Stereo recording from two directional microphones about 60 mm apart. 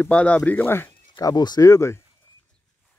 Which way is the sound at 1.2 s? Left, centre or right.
Left.